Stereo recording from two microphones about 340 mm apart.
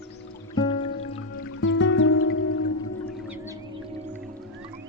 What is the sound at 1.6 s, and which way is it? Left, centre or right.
Music, left.